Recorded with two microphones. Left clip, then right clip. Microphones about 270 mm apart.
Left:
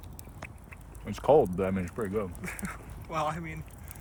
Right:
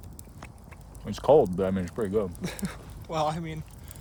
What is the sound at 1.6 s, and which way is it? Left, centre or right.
Speech, right.